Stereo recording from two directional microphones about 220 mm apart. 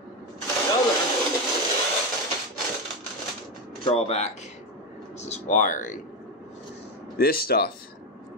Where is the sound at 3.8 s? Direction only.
30° left (ahead or behind).